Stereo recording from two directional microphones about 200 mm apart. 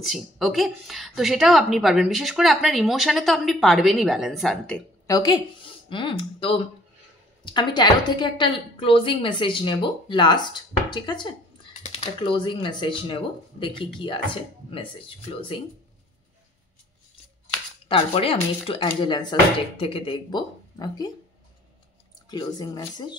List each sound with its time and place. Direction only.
0.0 s a woman's voice: centre (ahead or behind)
5.0 s a woman's voice: 20° left (ahead or behind)
17.8 s a woman's voice: 25° left (ahead or behind)
22.3 s a woman's voice: 20° left (ahead or behind)